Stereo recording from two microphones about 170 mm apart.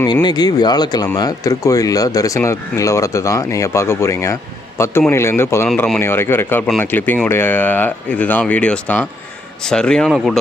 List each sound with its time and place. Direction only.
0.0 s speech: 25° left (ahead or behind); by 10.3 s centre (ahead or behind)